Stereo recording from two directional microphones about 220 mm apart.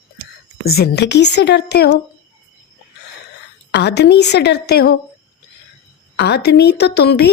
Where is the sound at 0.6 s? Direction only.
45° left (ahead or behind).